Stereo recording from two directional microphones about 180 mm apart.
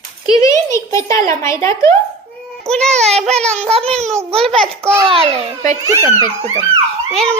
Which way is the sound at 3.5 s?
35° right (ahead or behind).